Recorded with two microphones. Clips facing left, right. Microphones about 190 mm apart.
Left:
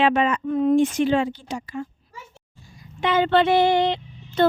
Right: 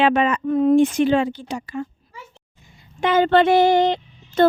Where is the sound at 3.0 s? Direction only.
45° right (ahead or behind).